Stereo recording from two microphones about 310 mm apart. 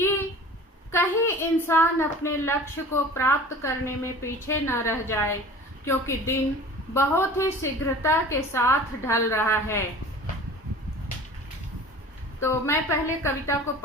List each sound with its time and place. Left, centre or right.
0.9 s a woman's voice: centre
12.4 s a woman's voice: centre